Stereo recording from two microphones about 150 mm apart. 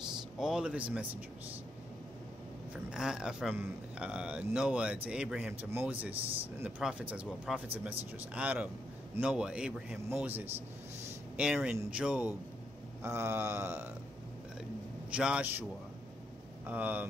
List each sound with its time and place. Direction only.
0.4 s speech: 5° right (ahead or behind)
2.9 s speech: 5° right (ahead or behind)
15.0 s speech: 5° right (ahead or behind)
16.6 s speech: 10° right (ahead or behind)